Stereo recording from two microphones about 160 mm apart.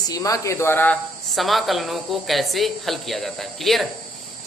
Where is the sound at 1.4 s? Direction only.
Centre (ahead or behind).